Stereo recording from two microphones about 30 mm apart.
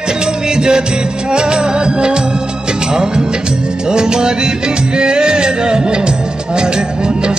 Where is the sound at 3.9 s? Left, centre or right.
Right.